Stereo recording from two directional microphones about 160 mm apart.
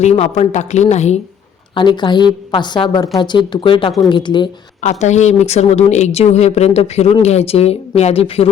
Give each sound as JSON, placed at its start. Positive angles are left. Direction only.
{"t": 0.0, "sound": "speech", "side_deg": 45}
{"t": 1.7, "sound": "a woman's voice", "side_deg": 30}
{"t": 4.8, "sound": "speech", "side_deg": 45}